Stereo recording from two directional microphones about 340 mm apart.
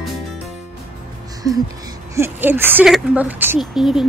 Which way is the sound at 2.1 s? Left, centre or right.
Centre.